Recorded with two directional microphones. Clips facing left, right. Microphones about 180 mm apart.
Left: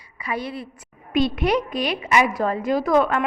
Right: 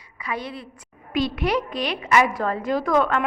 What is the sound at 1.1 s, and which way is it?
A woman's voice, 20° left (ahead or behind).